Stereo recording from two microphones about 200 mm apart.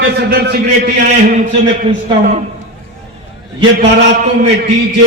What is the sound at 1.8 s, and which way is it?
Speech, 40° right (ahead or behind).